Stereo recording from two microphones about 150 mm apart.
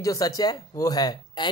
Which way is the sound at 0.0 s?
25° left (ahead or behind).